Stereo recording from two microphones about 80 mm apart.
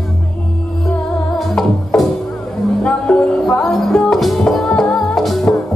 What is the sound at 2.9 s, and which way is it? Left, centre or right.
Music, centre.